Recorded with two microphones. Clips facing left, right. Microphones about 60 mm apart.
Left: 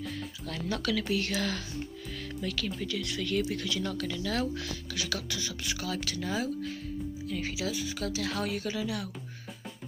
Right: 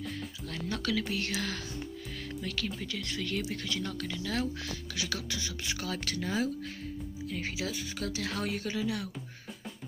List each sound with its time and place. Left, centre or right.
0.5 s speech: right
2.4 s speech: right
3.2 s speech: centre
3.5 s speech: right
3.8 s speech: centre; by 6.2 s right
7.2 s speech: right